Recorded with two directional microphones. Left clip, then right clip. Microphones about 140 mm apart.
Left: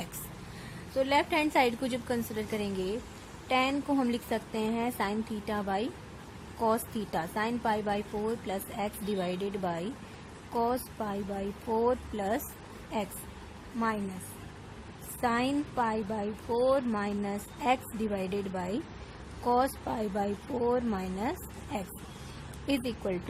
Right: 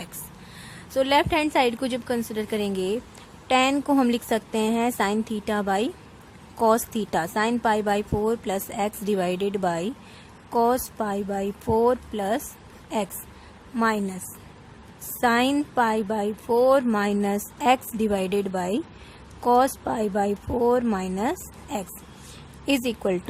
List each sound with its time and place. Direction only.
0.9 s a woman's voice: 55° right (ahead or behind)
15.2 s a woman's voice: 55° right (ahead or behind)